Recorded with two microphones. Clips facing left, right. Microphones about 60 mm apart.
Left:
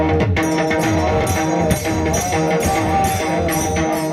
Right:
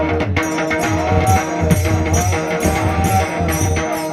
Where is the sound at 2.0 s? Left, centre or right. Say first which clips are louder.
Left 1 dB; centre.